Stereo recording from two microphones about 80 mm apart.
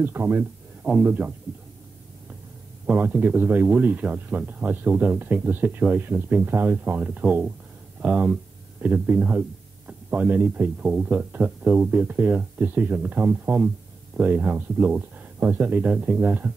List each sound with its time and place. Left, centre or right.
0.0 s speech: right
2.9 s speech: right